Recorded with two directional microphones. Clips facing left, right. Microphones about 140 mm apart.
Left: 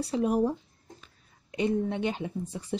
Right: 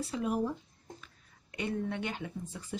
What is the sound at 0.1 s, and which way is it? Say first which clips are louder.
Speech: left 7 dB; 40° left (ahead or behind).